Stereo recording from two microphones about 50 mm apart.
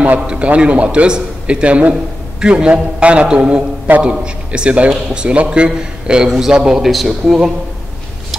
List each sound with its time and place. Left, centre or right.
0.3 s a man's voice: right
6.8 s a man's voice: centre